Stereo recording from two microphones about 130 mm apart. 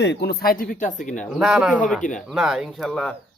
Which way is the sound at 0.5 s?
90° left.